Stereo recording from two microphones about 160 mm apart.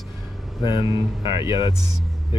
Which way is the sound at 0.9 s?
20° right (ahead or behind).